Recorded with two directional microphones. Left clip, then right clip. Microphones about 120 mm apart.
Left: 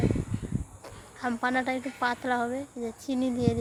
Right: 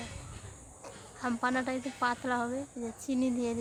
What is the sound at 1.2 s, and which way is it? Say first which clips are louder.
Speech: left 4 dB; 20° left (ahead or behind).